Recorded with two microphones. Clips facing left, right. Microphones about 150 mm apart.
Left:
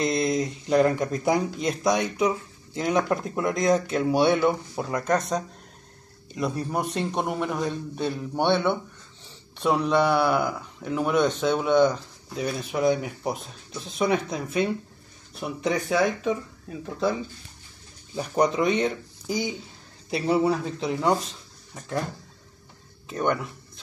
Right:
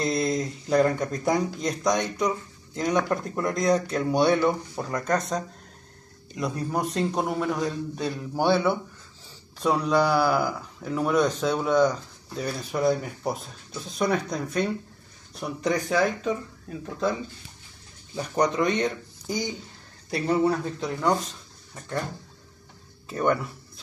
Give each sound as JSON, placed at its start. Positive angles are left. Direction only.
{"t": 0.0, "sound": "speech", "side_deg": 0}
{"t": 6.4, "sound": "speech", "side_deg": 0}
{"t": 7.6, "sound": "a man's voice", "side_deg": 25}
{"t": 8.2, "sound": "speech", "side_deg": 0}
{"t": 18.1, "sound": "speech", "side_deg": 10}
{"t": 23.0, "sound": "speech", "side_deg": 0}